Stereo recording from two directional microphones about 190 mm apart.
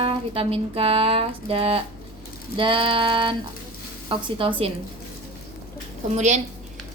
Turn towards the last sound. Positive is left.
turn(degrees=-35)  # may be behind; listen again after turning